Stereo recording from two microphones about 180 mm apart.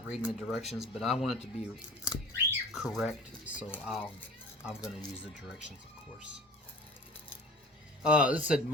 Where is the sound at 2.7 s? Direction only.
Centre (ahead or behind).